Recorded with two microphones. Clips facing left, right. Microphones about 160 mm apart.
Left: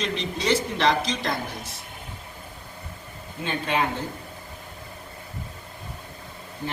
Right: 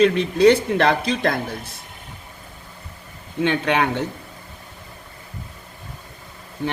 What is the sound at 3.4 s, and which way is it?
Speech, 80° right.